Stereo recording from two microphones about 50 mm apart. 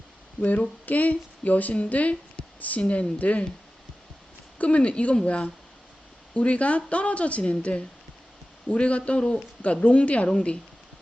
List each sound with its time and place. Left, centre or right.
0.9 s a woman's voice: left
4.5 s a woman's voice: left